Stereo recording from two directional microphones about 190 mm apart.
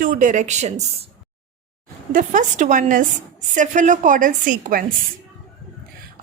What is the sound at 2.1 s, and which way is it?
A woman's voice, 45° right (ahead or behind).